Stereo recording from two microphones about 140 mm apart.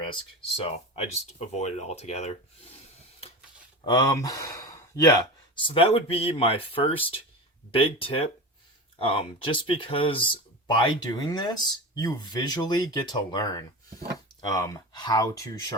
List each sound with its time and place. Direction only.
0.0 s speech: 40° left (ahead or behind)
3.8 s speech: 25° left (ahead or behind)